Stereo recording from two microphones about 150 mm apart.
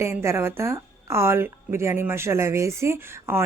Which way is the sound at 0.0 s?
15° right (ahead or behind).